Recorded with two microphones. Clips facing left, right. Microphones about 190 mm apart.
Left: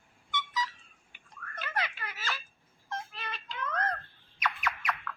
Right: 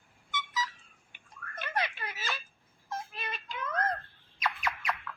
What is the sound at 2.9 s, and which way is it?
Music, 10° right (ahead or behind).